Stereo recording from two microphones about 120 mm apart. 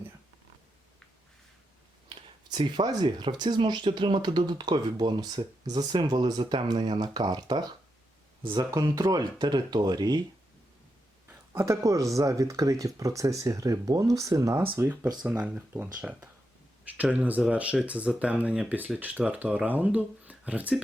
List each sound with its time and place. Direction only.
2.0 s speech: 40° right (ahead or behind)
11.3 s speech: 20° right (ahead or behind)
14.7 s speech: 15° right (ahead or behind)